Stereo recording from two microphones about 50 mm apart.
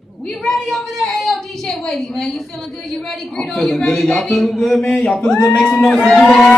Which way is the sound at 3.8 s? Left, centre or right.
Centre.